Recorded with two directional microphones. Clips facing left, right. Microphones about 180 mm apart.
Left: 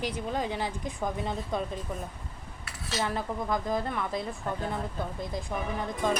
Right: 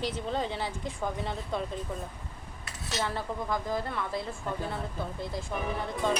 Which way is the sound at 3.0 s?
15° left (ahead or behind).